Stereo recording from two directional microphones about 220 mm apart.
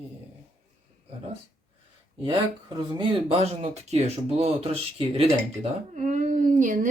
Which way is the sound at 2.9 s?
25° right (ahead or behind).